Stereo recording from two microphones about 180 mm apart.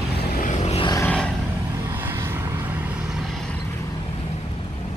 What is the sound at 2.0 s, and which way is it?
Vehicle, 15° right (ahead or behind).